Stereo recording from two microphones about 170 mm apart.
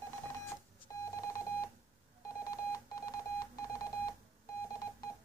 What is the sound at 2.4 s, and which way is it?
Telephone dialing, 20° left (ahead or behind).